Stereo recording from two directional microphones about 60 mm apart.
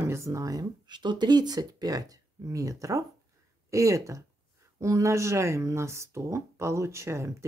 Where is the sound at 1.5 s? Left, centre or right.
Right.